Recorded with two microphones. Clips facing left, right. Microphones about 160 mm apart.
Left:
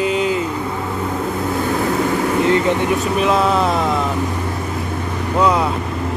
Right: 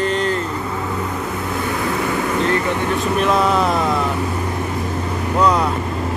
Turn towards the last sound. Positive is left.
turn(degrees=5)  # may be behind; listen again after turning